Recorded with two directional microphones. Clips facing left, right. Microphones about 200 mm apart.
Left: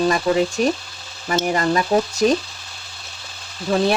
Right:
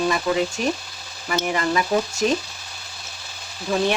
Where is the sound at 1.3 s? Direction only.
40° left (ahead or behind).